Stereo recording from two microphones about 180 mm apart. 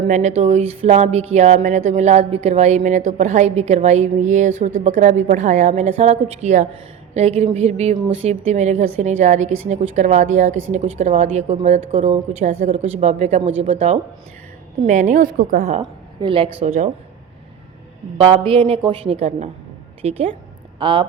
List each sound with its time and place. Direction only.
0.1 s a woman's voice: 40° right (ahead or behind)
15.8 s speech: 30° right (ahead or behind)
18.2 s speech: 30° right (ahead or behind)